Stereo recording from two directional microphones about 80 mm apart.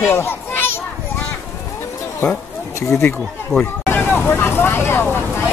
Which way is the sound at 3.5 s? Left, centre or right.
Right.